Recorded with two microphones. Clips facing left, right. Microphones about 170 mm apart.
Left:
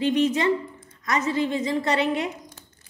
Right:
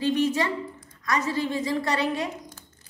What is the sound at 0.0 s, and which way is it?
A woman's voice, 20° left (ahead or behind).